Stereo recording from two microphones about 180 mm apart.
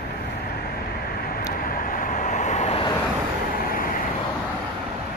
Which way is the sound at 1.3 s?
50° left (ahead or behind).